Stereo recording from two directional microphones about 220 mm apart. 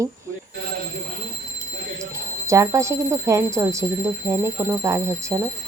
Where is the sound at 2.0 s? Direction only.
15° right (ahead or behind).